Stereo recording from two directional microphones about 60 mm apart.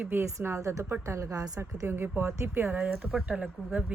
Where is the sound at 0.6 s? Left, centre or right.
Right.